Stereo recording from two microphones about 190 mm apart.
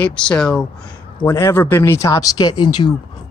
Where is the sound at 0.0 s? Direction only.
5° left (ahead or behind).